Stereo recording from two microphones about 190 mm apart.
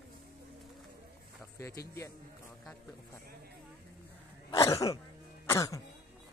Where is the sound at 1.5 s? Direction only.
15° left (ahead or behind).